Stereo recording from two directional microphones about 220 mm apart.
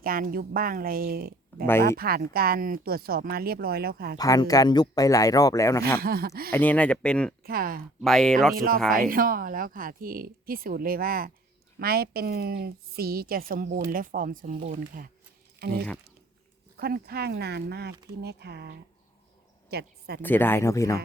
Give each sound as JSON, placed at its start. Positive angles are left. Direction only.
{"t": 0.0, "sound": "speech", "side_deg": -40}
{"t": 4.2, "sound": "speech", "side_deg": 15}
{"t": 6.0, "sound": "speech", "side_deg": -45}
{"t": 6.5, "sound": "speech", "side_deg": 10}
{"t": 7.4, "sound": "speech", "side_deg": -40}
{"t": 8.0, "sound": "speech", "side_deg": 0}
{"t": 8.5, "sound": "speech", "side_deg": -40}
{"t": 16.7, "sound": "speech", "side_deg": -45}
{"t": 20.2, "sound": "speech", "side_deg": 10}